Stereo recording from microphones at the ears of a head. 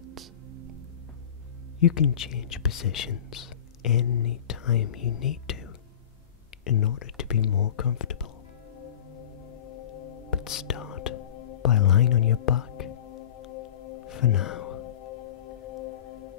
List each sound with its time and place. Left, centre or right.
0.0 s music: right
1.8 s speech: left
8.7 s music: left